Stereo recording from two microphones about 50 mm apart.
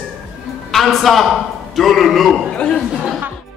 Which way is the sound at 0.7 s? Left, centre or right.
Centre.